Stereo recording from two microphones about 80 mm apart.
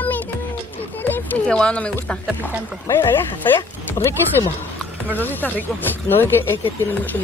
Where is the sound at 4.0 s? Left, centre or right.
Left.